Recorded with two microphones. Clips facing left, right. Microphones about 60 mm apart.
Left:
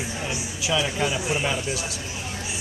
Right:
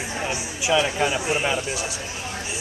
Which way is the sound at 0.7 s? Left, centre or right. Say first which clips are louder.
Right 4 dB; right.